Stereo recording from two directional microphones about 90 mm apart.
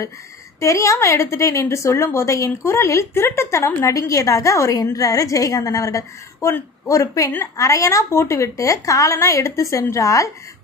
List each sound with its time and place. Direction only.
0.6 s a woman's voice: 35° left (ahead or behind)